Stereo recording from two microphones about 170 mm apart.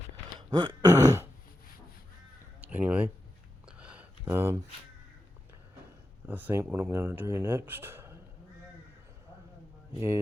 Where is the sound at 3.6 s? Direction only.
5° right (ahead or behind).